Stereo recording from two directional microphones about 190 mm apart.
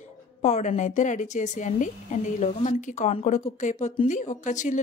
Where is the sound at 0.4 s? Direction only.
35° left (ahead or behind).